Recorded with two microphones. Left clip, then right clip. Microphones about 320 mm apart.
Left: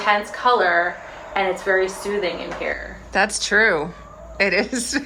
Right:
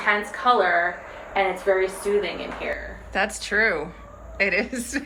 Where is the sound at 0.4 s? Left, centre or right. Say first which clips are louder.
Left 2 dB; left.